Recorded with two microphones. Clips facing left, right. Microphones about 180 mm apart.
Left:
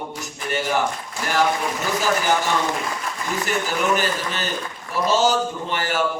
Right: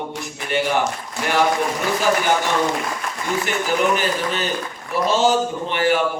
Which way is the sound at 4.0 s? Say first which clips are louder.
Right 3 dB; 40° left (ahead or behind).